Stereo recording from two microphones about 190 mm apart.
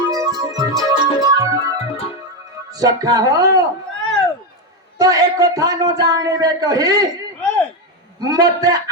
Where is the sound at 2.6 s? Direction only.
20° right (ahead or behind).